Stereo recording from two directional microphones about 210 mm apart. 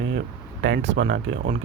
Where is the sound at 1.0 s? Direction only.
50° right (ahead or behind).